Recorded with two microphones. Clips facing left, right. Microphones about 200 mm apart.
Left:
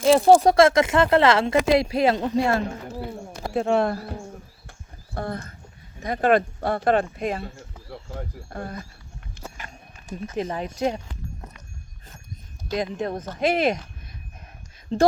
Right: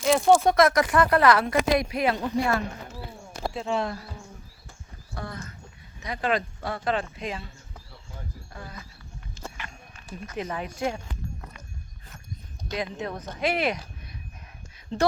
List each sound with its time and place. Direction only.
0.0 s speech: 30° left (ahead or behind)
3.5 s speech: 60° left (ahead or behind)
7.5 s a sound: 75° left (ahead or behind)
8.4 s speech: 55° left (ahead or behind)
9.6 s a sound: 40° left (ahead or behind)
10.3 s speech: 30° left (ahead or behind)
12.7 s speech: 40° left (ahead or behind)